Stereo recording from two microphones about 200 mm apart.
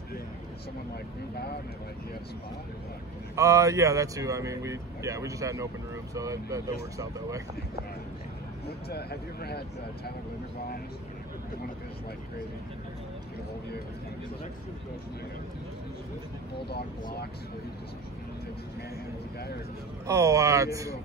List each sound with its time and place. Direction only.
3.3 s speech: 15° right (ahead or behind)
8.6 s speech: 55° left (ahead or behind)
16.6 s speech: 55° left (ahead or behind)
20.1 s speech: 15° right (ahead or behind)